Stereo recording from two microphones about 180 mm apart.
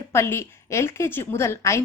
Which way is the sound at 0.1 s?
15° left (ahead or behind).